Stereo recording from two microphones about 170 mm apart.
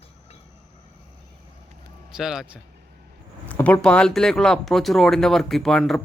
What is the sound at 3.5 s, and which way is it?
Speech, 10° left (ahead or behind).